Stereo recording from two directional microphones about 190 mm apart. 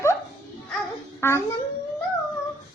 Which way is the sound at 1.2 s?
15° left (ahead or behind).